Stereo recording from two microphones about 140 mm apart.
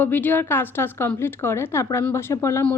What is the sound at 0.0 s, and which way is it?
A woman's voice, 15° left (ahead or behind).